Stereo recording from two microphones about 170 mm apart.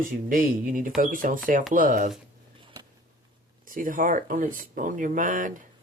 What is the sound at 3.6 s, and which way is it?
Speech, 55° right (ahead or behind).